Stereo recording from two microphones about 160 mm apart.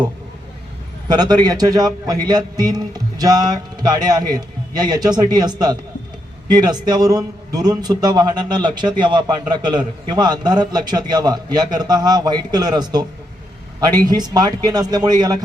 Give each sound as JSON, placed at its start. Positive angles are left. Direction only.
{"t": 1.0, "sound": "a man's voice", "side_deg": -25}